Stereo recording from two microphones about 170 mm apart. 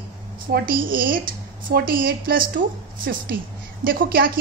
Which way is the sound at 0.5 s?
60° right (ahead or behind).